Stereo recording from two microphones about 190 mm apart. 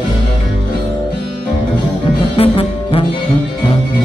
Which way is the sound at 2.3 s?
30° left (ahead or behind).